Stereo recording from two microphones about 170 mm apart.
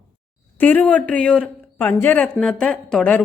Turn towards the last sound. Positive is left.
turn(degrees=5)  # may be behind; listen again after turning